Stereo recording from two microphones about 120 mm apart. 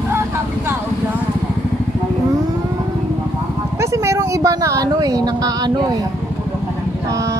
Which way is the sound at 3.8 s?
25° right (ahead or behind).